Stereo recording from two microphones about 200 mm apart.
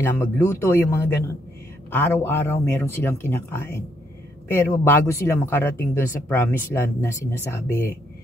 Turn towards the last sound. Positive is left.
turn(degrees=10)  # may be behind; listen again after turning